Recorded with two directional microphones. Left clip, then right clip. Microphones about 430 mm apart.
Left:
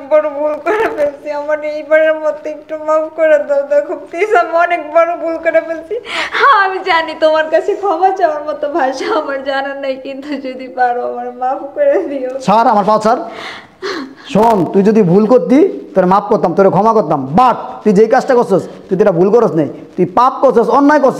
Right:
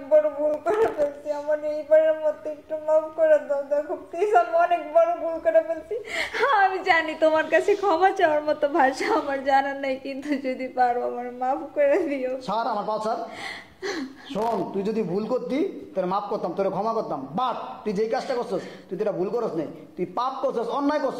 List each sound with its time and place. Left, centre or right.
1.3 s speech: left
6.3 s a woman's voice: centre
7.5 s a woman's voice: centre
12.4 s speech: left
14.3 s speech: left